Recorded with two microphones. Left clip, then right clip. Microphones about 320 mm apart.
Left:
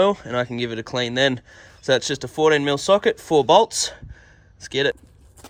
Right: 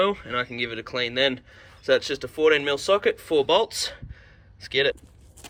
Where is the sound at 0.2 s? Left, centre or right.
Right.